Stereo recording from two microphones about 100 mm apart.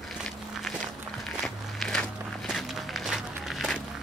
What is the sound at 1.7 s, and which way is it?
Walk, 5° left (ahead or behind).